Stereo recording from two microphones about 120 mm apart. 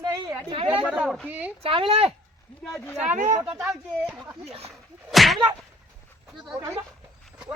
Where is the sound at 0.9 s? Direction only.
Centre (ahead or behind).